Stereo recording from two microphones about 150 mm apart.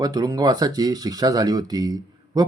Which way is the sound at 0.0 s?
25° right (ahead or behind).